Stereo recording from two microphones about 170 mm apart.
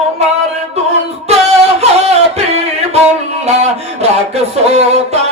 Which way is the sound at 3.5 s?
40° right (ahead or behind).